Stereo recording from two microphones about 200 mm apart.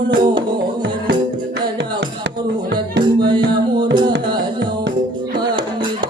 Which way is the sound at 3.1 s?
20° right (ahead or behind).